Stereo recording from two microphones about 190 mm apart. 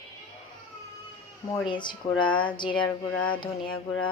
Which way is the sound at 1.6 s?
25° left (ahead or behind).